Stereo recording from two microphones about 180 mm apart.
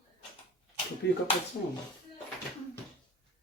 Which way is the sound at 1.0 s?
75° left (ahead or behind).